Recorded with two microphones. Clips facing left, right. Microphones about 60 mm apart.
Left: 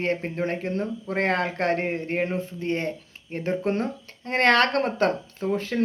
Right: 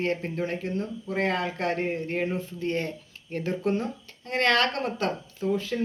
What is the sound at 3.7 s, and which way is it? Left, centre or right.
Speech, left.